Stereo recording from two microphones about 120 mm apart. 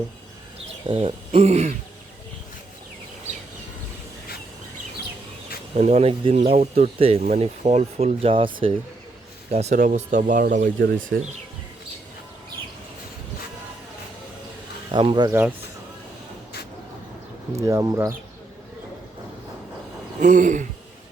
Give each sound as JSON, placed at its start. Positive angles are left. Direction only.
{"t": 0.9, "sound": "speech", "side_deg": -50}
{"t": 5.7, "sound": "speech", "side_deg": -60}
{"t": 9.5, "sound": "speech", "side_deg": -65}
{"t": 14.9, "sound": "speech", "side_deg": -40}
{"t": 15.3, "sound": "speech", "side_deg": -15}
{"t": 17.6, "sound": "speech", "side_deg": -25}
{"t": 20.2, "sound": "speech", "side_deg": -90}